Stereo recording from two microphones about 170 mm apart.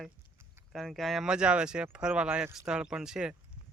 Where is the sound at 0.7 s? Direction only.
Centre (ahead or behind).